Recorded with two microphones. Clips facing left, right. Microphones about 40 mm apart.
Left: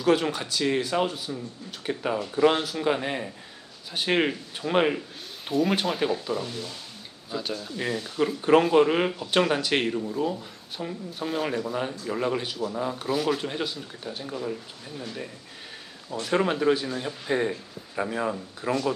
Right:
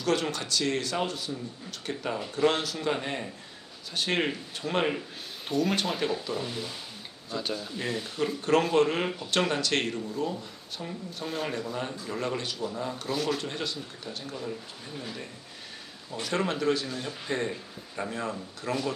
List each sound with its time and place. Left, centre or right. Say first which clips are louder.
0.0 s speech: left 5 dB; centre
7.3 s speech: left 1 dB; centre
8.4 s speech: left 5 dB; centre
14.9 s speech: left 2 dB; centre
16.2 s speech: left 4 dB; centre